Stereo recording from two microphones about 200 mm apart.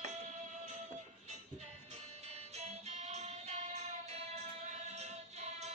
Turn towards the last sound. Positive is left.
turn(degrees=-35)  # may be behind; listen again after turning